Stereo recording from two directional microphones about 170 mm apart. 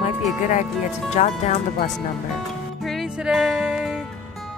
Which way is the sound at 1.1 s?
40° left (ahead or behind).